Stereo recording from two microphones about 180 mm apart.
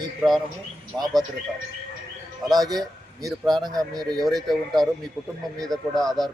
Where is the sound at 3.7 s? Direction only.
20° right (ahead or behind).